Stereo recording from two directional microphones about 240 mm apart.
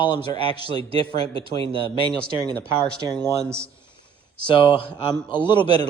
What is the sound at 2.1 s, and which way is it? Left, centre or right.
Speech, centre.